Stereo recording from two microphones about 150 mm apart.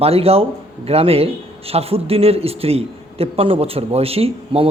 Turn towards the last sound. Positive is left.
turn(degrees=-40)  # may be behind; listen again after turning